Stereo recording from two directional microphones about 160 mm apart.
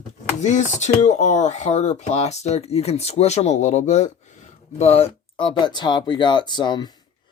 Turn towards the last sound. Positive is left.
turn(degrees=25)  # may be behind; listen again after turning